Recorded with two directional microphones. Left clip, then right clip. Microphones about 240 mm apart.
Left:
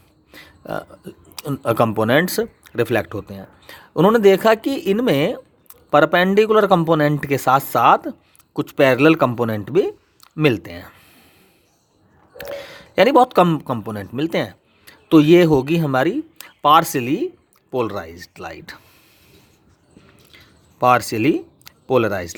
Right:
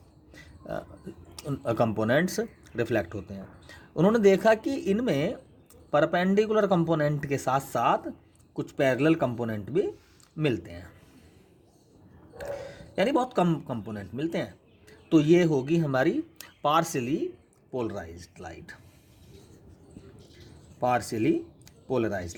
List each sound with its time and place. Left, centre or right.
0.3 s speech: left
12.4 s a man's voice: left
20.7 s speech: left